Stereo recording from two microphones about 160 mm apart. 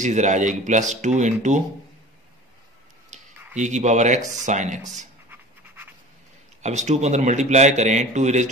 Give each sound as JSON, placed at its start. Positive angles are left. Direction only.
{"t": 0.0, "sound": "a man's voice", "side_deg": -50}
{"t": 3.1, "sound": "a sound", "side_deg": -50}
{"t": 3.5, "sound": "a man's voice", "side_deg": -45}
{"t": 6.6, "sound": "a man's voice", "side_deg": -45}